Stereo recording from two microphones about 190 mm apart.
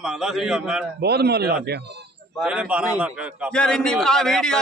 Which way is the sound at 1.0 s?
55° right (ahead or behind).